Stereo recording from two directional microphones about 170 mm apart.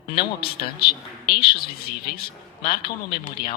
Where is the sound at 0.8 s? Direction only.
65° left (ahead or behind).